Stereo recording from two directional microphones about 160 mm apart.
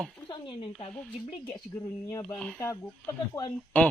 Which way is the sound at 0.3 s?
30° left (ahead or behind).